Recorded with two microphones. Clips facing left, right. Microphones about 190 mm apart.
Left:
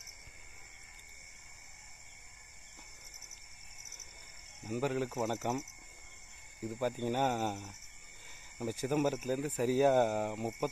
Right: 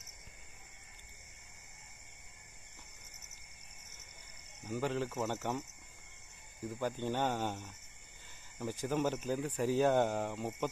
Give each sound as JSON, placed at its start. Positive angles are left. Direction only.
{"t": 4.6, "sound": "speech", "side_deg": 10}
{"t": 6.6, "sound": "speech", "side_deg": 10}